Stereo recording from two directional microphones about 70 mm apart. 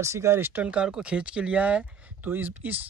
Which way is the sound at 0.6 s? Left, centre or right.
Centre.